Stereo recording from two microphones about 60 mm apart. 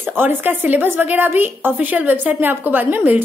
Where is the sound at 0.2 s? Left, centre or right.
Right.